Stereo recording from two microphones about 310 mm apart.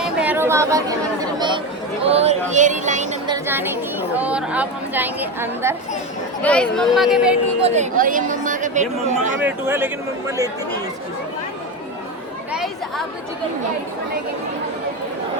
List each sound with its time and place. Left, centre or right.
0.0 s chatter: centre
2.0 s music: centre
3.3 s speech: centre
7.6 s speech: right
9.4 s speech: centre
12.5 s chatter: centre